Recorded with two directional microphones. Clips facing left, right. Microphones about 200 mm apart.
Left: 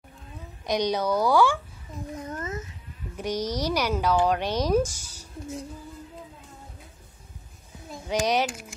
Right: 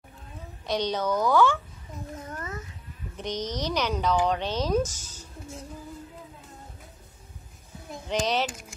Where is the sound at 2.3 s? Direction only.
20° left (ahead or behind).